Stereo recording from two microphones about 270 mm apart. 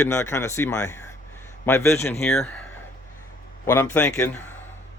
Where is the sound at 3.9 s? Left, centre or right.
Centre.